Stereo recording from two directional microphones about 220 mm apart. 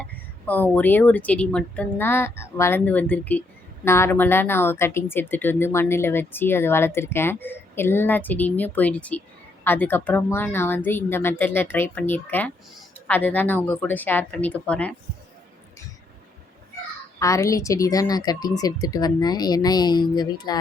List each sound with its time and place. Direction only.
0.0 s speech: 5° left (ahead or behind)
17.2 s speech: 15° left (ahead or behind)